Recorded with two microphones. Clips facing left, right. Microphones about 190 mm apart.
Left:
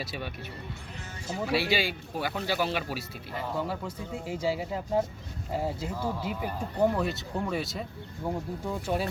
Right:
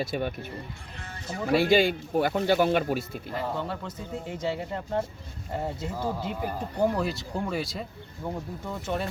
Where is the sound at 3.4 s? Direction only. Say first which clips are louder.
Even; 5° left (ahead or behind).